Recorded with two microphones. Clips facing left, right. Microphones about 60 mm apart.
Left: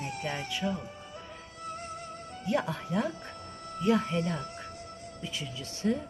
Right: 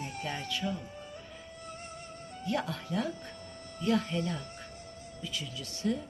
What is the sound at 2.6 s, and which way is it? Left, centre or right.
Speech, left.